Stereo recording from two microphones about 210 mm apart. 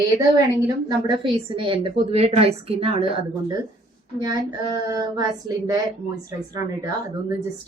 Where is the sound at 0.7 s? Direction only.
20° right (ahead or behind).